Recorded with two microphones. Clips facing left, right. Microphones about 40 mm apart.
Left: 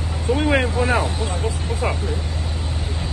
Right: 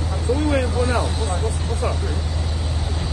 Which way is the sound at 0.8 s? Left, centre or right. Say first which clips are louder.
Left 2 dB; left.